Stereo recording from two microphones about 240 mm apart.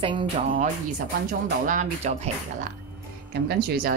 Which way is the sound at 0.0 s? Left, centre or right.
Right.